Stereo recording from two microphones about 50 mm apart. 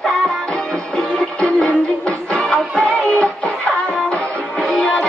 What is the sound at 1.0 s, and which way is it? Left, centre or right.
Music, centre.